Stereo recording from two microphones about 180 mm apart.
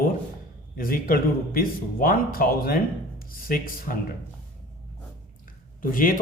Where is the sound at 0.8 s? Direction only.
50° left (ahead or behind).